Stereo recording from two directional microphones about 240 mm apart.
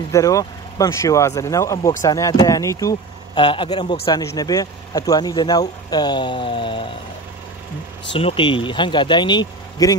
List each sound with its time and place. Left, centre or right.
0.1 s speech: centre
8.1 s speech: left